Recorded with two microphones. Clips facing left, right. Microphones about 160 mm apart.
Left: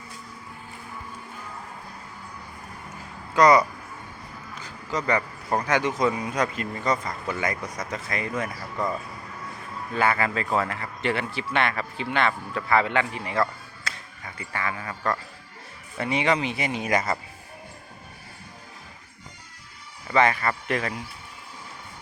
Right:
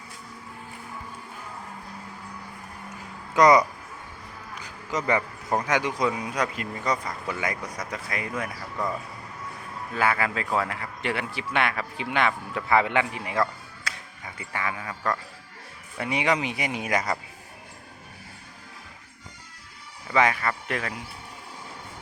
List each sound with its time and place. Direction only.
3.3 s speech: 20° right (ahead or behind)
4.5 s a sound: 15° right (ahead or behind)
5.5 s speech: 10° right (ahead or behind)
9.9 s speech: 5° right (ahead or behind)
13.9 s a sound: 10° right (ahead or behind)
14.3 s speech: 15° right (ahead or behind)
16.0 s speech: 10° right (ahead or behind)
20.1 s speech: 5° right (ahead or behind)